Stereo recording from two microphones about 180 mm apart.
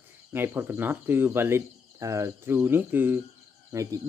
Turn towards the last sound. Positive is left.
turn(degrees=-15)  # may be behind; listen again after turning